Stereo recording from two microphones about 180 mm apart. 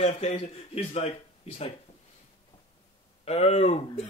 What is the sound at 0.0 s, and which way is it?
Speech, 35° left (ahead or behind).